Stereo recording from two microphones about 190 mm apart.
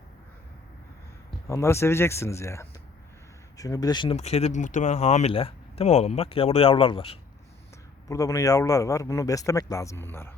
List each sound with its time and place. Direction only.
1.5 s speech: 15° left (ahead or behind)
8.0 s speech: 15° left (ahead or behind)